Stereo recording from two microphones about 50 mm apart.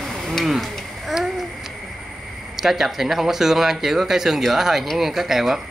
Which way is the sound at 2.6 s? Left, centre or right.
Centre.